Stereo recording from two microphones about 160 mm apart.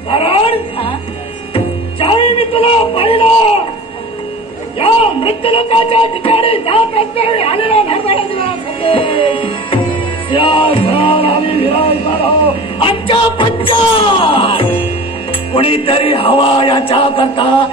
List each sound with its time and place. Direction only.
0.1 s speech: 35° left (ahead or behind)
1.5 s music: 35° left (ahead or behind)
4.7 s a man's voice: 35° left (ahead or behind)